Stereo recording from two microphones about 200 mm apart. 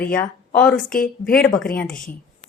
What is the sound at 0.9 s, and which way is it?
Speech, 45° left (ahead or behind).